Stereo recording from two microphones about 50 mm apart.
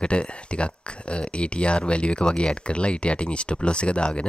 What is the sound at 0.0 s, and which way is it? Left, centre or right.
Speech, left.